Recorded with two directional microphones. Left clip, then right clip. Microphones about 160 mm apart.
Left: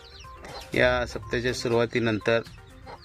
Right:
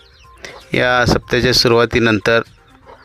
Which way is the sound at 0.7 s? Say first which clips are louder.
Right 10 dB; 45° right (ahead or behind).